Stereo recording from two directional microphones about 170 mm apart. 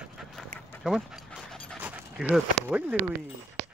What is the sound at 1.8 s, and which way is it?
Speech, 5° right (ahead or behind).